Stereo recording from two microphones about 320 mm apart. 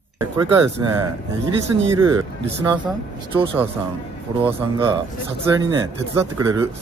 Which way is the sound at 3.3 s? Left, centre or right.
Centre.